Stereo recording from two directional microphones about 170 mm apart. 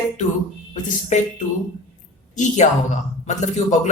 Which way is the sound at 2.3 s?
45° left (ahead or behind).